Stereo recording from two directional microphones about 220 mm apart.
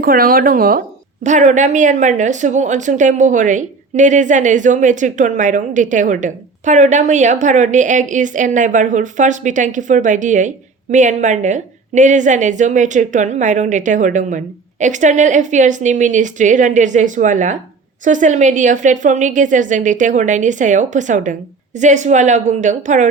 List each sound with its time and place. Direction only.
0.0 s a woman's voice: 40° right (ahead or behind)